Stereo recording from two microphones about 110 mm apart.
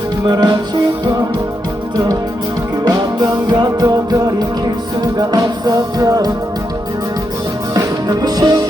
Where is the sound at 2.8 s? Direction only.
35° right (ahead or behind).